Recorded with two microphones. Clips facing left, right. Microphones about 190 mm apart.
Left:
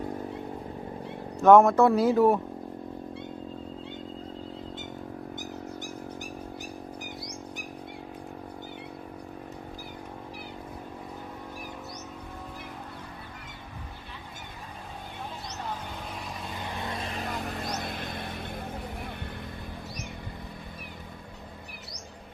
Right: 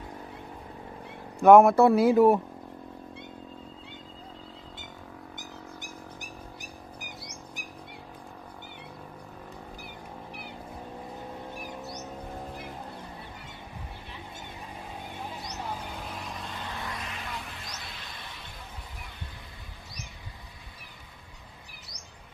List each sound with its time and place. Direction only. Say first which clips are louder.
1.4 s speech: right 1 dB; 10° right (ahead or behind)
16.6 s vehicle: left 6 dB; 20° left (ahead or behind); by 19.1 s 55° left (ahead or behind)